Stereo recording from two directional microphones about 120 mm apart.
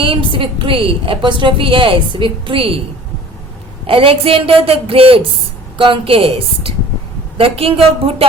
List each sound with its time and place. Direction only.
0.0 s a woman's voice: 45° right (ahead or behind)
3.8 s a woman's voice: 50° right (ahead or behind)